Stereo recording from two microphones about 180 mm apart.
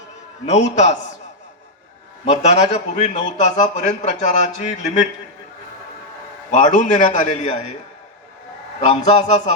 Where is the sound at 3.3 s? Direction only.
40° left (ahead or behind).